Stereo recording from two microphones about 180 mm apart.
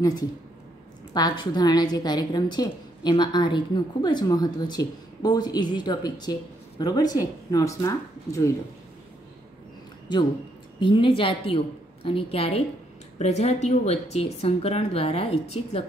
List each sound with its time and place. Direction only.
0.0 s a woman's voice: 20° left (ahead or behind)
10.8 s a woman's voice: 25° left (ahead or behind)